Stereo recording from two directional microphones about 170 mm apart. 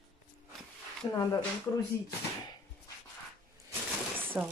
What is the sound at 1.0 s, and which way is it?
Speech, 20° left (ahead or behind).